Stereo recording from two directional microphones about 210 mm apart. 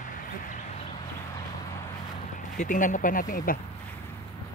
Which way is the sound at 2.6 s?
40° left (ahead or behind).